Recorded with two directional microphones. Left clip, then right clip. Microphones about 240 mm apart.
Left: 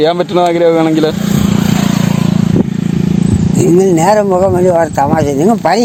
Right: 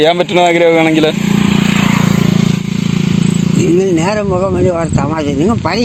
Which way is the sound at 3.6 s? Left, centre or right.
Left.